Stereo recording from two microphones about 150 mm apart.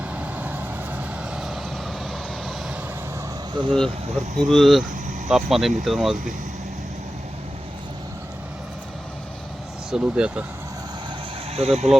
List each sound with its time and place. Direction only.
0.1 s vehicle: 10° right (ahead or behind)
3.7 s speech: 5° left (ahead or behind)
9.9 s speech: 5° right (ahead or behind)
11.5 s speech: 45° right (ahead or behind)